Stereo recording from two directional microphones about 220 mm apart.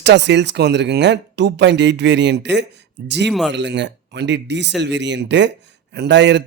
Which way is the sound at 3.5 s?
55° right (ahead or behind).